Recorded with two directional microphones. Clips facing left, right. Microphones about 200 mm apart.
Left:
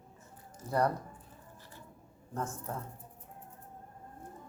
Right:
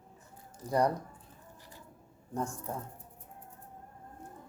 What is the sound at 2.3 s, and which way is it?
Speech, 15° right (ahead or behind).